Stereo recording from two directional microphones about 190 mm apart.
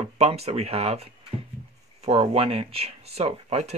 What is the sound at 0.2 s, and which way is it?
Speech, 30° right (ahead or behind).